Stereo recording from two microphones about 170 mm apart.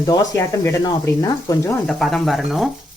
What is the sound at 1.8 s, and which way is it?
Speech, centre (ahead or behind).